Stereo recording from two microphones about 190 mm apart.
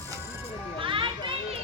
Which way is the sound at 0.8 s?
25° right (ahead or behind).